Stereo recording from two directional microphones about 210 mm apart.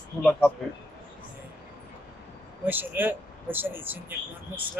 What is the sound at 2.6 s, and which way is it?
Speech, 10° right (ahead or behind).